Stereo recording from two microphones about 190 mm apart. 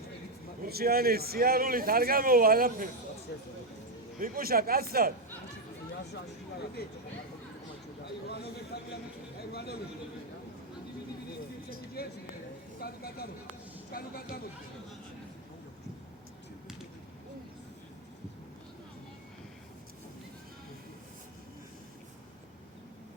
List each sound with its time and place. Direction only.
0.6 s a man's voice: 50° right (ahead or behind)
4.2 s a man's voice: 50° right (ahead or behind)
8.0 s a man's voice: 60° left (ahead or behind)
12.0 s speech: 55° left (ahead or behind)